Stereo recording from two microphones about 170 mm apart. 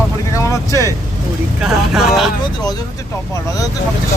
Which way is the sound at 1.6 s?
Centre (ahead or behind).